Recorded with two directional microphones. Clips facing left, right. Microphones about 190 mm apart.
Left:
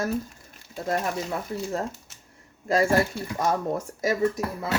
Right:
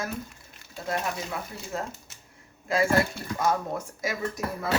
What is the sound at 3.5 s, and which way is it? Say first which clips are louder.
Speech: left 2 dB; 40° left (ahead or behind).